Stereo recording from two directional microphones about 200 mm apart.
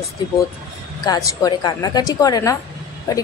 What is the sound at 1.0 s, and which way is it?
A woman's voice, 20° left (ahead or behind).